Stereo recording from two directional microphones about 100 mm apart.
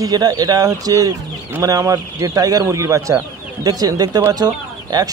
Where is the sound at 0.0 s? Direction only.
40° right (ahead or behind).